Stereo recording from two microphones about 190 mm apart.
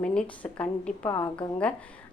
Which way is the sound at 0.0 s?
5° left (ahead or behind).